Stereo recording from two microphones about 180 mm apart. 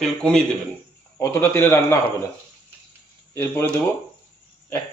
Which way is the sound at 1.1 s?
15° left (ahead or behind).